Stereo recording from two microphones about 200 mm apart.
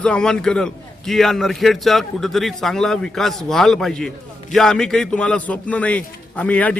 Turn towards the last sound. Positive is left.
turn(degrees=5)  # may be behind; listen again after turning